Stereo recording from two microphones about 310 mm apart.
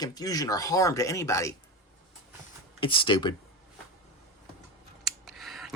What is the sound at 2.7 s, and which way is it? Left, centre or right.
Speech, centre.